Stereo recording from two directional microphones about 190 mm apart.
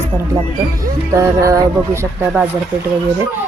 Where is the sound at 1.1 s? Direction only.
15° right (ahead or behind).